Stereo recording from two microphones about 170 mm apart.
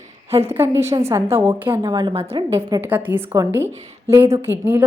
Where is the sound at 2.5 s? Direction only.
15° right (ahead or behind).